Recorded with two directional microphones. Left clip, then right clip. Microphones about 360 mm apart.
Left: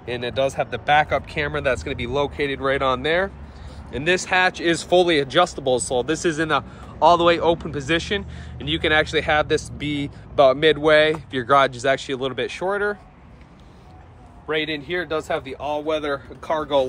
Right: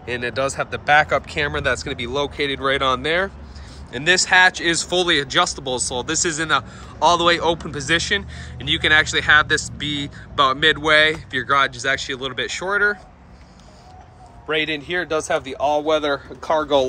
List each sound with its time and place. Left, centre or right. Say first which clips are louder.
0.0 s speech: even; centre
14.5 s a man's voice: right 2 dB; centre